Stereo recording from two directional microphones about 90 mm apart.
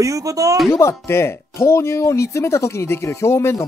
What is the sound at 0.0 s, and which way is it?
Speech, 40° right (ahead or behind).